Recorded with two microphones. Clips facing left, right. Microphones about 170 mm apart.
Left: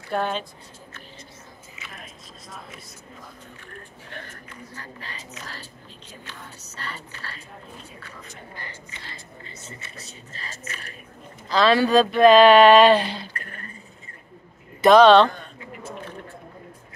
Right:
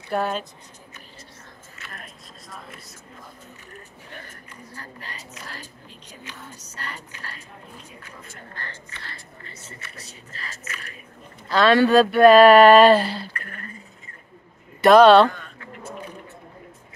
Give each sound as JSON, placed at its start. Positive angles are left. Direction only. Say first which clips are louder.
{"t": 0.1, "sound": "speech", "louder": "right 1 dB", "side_deg": -5}
{"t": 1.8, "sound": "biting", "louder": "right 1 dB", "side_deg": 5}
{"t": 5.0, "sound": "speech", "louder": "even", "side_deg": -10}
{"t": 8.5, "sound": "speech", "louder": "right 1 dB", "side_deg": 15}
{"t": 11.4, "sound": "speech", "louder": "right 2 dB", "side_deg": -5}
{"t": 14.8, "sound": "speech", "louder": "right 1 dB", "side_deg": -5}
{"t": 15.2, "sound": "speech", "louder": "right 2 dB", "side_deg": 35}
{"t": 15.9, "sound": "a sound", "louder": "right 1 dB", "side_deg": -15}